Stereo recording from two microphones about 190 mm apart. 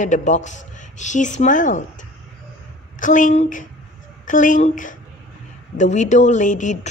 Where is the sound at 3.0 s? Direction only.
45° left (ahead or behind).